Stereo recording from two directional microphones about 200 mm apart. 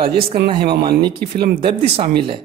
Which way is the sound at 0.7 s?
50° right (ahead or behind).